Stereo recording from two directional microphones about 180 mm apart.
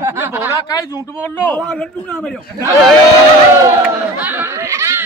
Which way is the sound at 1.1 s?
10° left (ahead or behind).